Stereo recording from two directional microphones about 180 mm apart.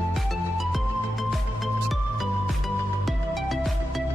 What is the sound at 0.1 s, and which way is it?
Music, centre (ahead or behind).